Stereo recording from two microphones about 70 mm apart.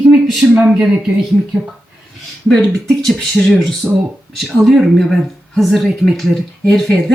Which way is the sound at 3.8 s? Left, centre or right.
Centre.